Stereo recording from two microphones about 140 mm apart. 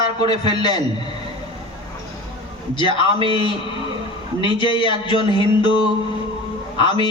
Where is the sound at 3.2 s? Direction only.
35° left (ahead or behind).